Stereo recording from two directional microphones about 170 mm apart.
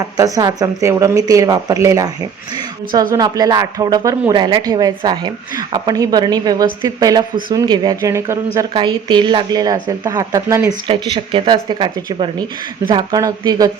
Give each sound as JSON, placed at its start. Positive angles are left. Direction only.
{"t": 0.0, "sound": "a woman's voice", "side_deg": -20}
{"t": 3.2, "sound": "a woman's voice", "side_deg": -20}
{"t": 10.8, "sound": "a woman's voice", "side_deg": -30}